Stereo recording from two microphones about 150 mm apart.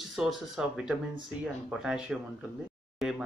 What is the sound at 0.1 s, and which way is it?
Speech, 5° right (ahead or behind).